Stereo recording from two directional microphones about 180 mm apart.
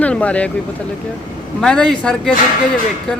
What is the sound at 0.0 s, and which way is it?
Speech, 5° left (ahead or behind).